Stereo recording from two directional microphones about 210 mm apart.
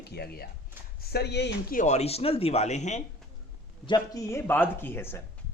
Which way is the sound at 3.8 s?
20° left (ahead or behind).